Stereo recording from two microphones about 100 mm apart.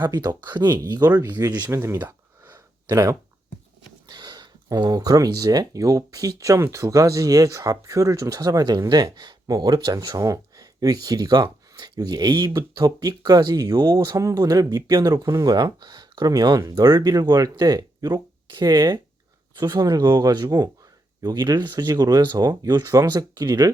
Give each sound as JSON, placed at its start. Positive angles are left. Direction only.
{"t": 0.0, "sound": "speech", "side_deg": -45}
{"t": 1.4, "sound": "speech", "side_deg": -30}
{"t": 1.7, "sound": "a sound", "side_deg": -25}
{"t": 2.9, "sound": "speech", "side_deg": -30}
{"t": 4.1, "sound": "speech", "side_deg": -45}
{"t": 14.2, "sound": "speech", "side_deg": -35}